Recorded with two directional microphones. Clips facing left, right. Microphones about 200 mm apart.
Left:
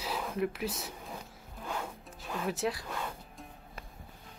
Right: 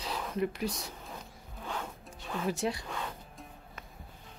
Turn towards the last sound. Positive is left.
turn(degrees=0)  # may be behind; listen again after turning